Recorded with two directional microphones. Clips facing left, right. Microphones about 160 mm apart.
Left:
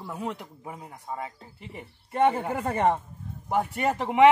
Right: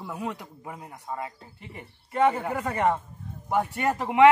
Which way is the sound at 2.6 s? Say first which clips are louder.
Left 1 dB; 30° left (ahead or behind).